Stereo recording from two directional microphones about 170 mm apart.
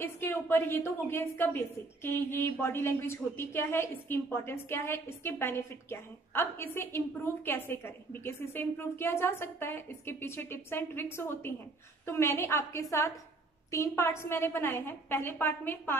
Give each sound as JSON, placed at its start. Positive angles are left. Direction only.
{"t": 0.0, "sound": "a woman's voice", "side_deg": 15}